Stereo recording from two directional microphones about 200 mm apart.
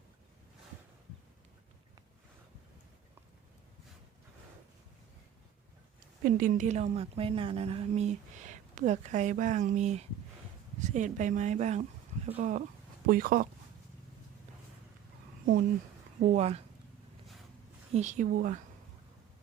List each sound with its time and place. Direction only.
6.2 s a woman's voice: 45° right (ahead or behind)
16.2 s a woman's voice: 35° right (ahead or behind)
17.9 s a woman's voice: 35° right (ahead or behind)